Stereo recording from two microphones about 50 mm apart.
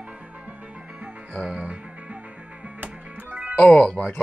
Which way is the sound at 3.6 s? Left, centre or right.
Left.